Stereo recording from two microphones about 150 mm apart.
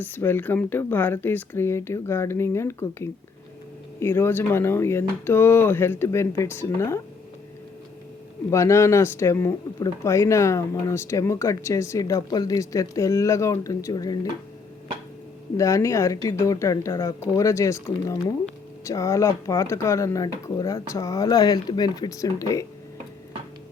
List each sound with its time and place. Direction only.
0.0 s speech: 15° left (ahead or behind)
8.4 s speech: 20° left (ahead or behind)
15.5 s speech: 20° left (ahead or behind)